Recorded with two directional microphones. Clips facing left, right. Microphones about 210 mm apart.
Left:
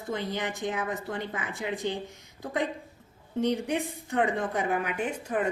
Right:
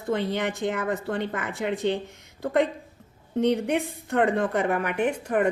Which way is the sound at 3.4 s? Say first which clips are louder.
Right 4 dB; 60° right (ahead or behind).